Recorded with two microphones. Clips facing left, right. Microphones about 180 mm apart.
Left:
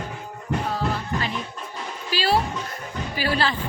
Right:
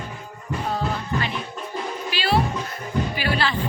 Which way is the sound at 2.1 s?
40° left (ahead or behind).